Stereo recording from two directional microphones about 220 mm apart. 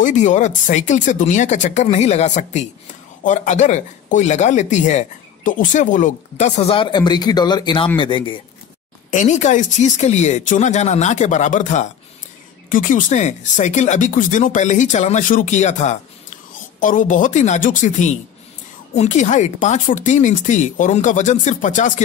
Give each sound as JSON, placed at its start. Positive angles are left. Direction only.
{"t": 0.0, "sound": "speech", "side_deg": 35}
{"t": 9.1, "sound": "speech", "side_deg": 35}